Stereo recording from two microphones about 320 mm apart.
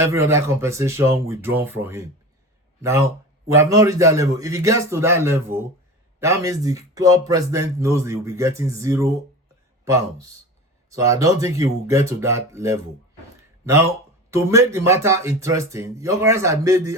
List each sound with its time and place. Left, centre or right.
0.0 s speech: centre
3.5 s speech: centre